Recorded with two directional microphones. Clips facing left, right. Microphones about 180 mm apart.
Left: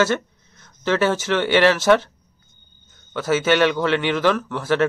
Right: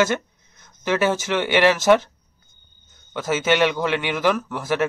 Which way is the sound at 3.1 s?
15° right (ahead or behind).